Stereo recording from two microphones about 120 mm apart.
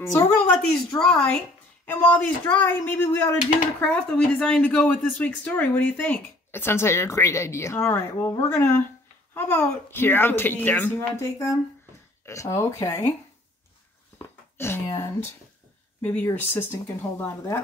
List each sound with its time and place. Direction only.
0.6 s a woman's voice: 5° left (ahead or behind); by 13.1 s 25° left (ahead or behind)
14.1 s a sound: 20° left (ahead or behind)
16.0 s speech: 10° left (ahead or behind)